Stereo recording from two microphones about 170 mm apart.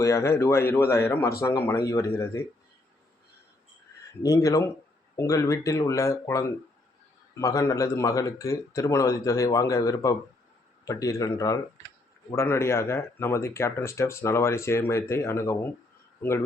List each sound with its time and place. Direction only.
0.0 s speech: 15° left (ahead or behind)
4.2 s speech: 20° left (ahead or behind)